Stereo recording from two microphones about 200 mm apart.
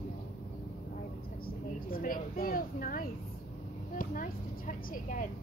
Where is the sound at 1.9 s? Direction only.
45° left (ahead or behind).